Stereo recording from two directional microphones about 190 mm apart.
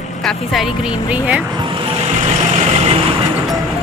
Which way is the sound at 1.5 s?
25° right (ahead or behind).